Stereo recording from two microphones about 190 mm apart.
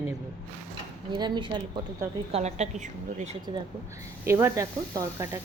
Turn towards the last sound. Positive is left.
turn(degrees=-15)  # may be behind; listen again after turning